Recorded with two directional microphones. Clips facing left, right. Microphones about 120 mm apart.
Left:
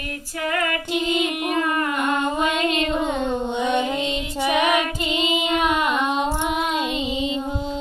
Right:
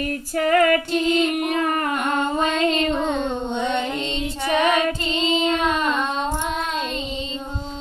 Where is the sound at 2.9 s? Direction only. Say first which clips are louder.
Even; 10° left (ahead or behind).